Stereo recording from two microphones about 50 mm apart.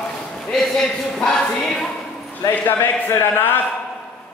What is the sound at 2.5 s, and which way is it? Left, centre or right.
Speech, left.